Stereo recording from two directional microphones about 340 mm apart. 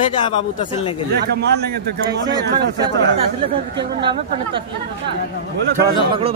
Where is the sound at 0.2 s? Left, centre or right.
Centre.